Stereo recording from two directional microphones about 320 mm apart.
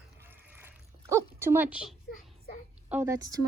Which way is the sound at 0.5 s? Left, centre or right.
Centre.